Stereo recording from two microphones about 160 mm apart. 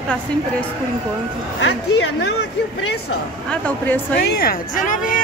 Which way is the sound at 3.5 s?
10° left (ahead or behind).